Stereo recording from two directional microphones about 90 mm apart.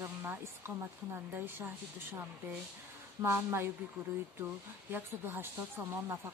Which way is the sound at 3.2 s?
30° right (ahead or behind).